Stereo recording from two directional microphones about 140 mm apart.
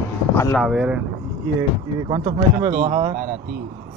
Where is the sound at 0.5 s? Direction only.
5° right (ahead or behind).